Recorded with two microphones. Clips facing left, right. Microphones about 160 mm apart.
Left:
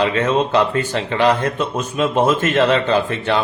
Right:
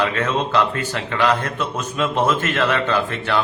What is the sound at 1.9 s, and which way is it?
Speech, 15° left (ahead or behind).